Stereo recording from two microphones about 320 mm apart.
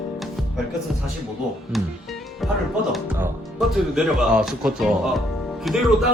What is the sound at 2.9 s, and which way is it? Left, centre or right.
Speech, centre.